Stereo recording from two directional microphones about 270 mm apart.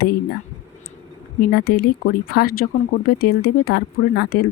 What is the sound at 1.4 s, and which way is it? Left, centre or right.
Speech, left.